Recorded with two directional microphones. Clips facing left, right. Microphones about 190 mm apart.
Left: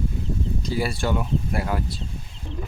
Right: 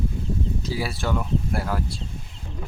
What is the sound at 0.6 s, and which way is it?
Speech, centre (ahead or behind).